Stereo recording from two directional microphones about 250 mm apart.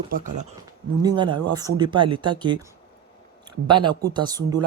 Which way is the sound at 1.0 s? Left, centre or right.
Centre.